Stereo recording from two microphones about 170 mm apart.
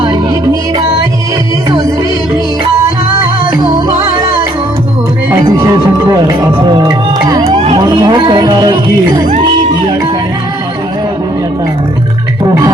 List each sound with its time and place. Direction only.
5.5 s music: 20° right (ahead or behind)
7.5 s vehicle: 40° right (ahead or behind)
7.8 s speech: 25° right (ahead or behind)